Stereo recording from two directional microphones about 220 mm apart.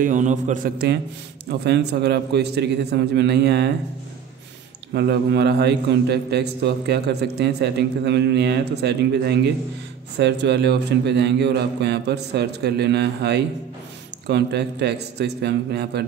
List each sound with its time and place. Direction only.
0.0 s a man's voice: 35° right (ahead or behind)
1.5 s a man's voice: 50° right (ahead or behind)
4.9 s a man's voice: 50° right (ahead or behind)